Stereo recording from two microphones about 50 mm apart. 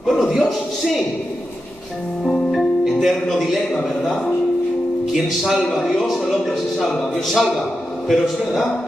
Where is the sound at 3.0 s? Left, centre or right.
Centre.